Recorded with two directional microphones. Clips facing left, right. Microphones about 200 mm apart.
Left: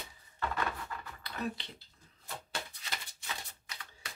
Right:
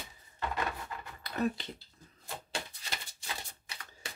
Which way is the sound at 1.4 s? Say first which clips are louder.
Right 6 dB; 45° right (ahead or behind).